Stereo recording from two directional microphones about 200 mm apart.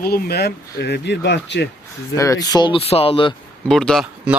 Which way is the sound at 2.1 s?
15° left (ahead or behind).